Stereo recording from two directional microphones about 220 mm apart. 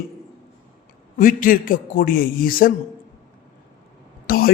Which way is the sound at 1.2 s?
40° left (ahead or behind).